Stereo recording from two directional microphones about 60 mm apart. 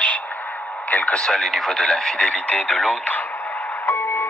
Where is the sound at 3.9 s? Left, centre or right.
Left.